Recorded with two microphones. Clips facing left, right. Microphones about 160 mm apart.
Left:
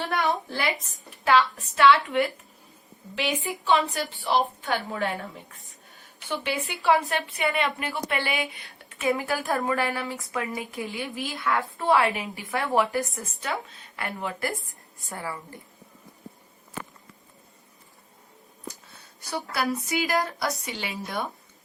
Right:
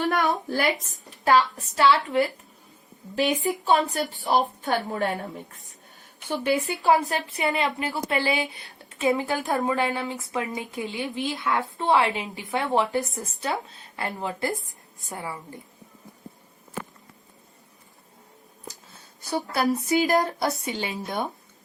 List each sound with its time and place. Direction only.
0.1 s a woman's voice: 40° right (ahead or behind)
6.4 s a woman's voice: 40° right (ahead or behind); by 15.5 s 20° right (ahead or behind)
19.3 s a woman's voice: 25° right (ahead or behind)